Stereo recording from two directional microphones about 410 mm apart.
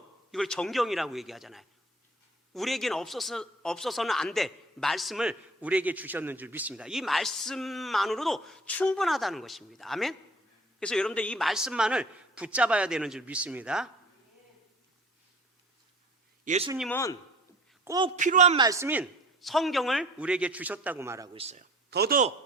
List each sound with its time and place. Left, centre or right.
0.3 s a man's voice: centre
16.4 s a man's voice: centre
16.7 s a man's voice: centre
17.8 s a man's voice: centre